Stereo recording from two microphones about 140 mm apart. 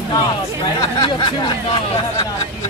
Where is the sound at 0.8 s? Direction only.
30° left (ahead or behind).